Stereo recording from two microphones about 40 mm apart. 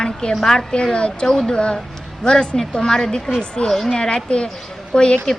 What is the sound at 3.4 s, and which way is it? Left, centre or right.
A woman's voice, left.